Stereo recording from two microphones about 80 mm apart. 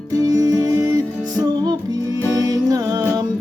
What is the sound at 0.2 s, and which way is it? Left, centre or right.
Music, right.